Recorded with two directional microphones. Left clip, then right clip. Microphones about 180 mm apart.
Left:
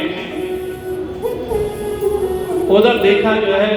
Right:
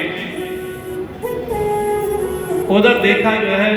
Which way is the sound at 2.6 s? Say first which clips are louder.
Left 1 dB; 25° right (ahead or behind).